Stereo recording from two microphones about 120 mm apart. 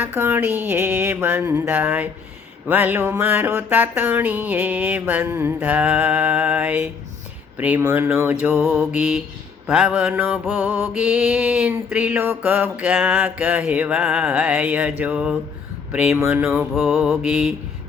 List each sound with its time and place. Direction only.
0.0 s a sound: 20° right (ahead or behind)
2.6 s mantra: 15° right (ahead or behind)
16.7 s mantra: centre (ahead or behind)